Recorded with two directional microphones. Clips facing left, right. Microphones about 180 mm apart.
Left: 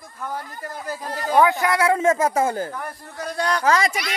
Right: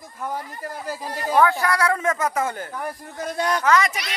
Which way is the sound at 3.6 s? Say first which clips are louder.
Even; 30° left (ahead or behind).